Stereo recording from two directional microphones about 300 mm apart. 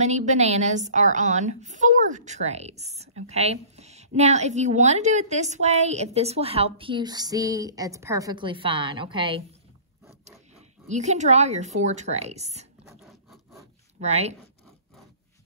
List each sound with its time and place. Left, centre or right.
0.0 s a woman's voice: right
12.8 s zipper: centre
13.9 s speech: right